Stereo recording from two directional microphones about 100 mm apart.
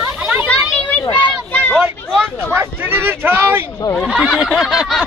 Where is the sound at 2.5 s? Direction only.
20° right (ahead or behind).